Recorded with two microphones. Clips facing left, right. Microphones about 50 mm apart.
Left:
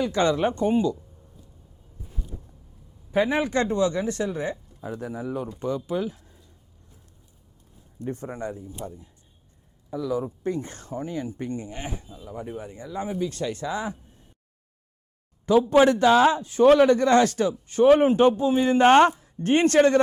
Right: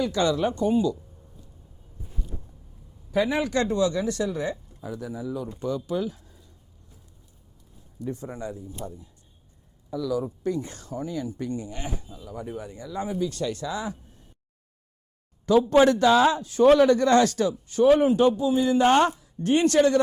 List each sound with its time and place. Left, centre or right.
0.0 s speech: left
2.3 s a sound: right
3.1 s speech: left
4.8 s speech: left
5.5 s speech: left
6.1 s a sound: left
7.9 s speech: left
8.8 s speech: left
15.6 s speech: centre; by 20.0 s left